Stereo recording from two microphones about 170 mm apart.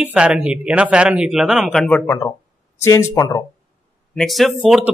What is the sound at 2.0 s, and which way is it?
Speech, 15° left (ahead or behind).